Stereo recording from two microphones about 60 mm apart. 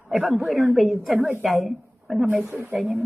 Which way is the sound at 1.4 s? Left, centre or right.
Centre.